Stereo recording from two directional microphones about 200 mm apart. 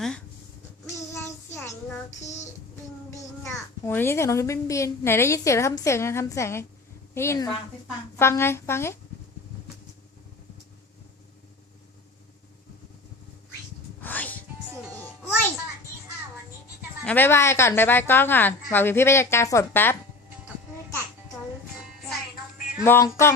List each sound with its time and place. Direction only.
0.9 s child singing: 15° left (ahead or behind)
2.0 s child singing: 35° left (ahead or behind)
3.4 s a child's voice: 10° left (ahead or behind)
14.0 s music: 10° left (ahead or behind)
17.0 s a child's voice: 10° left (ahead or behind)
22.8 s a child's voice: 15° left (ahead or behind)